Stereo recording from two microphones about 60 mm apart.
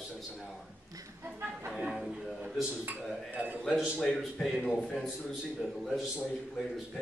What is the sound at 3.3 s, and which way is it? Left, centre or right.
Speech, right.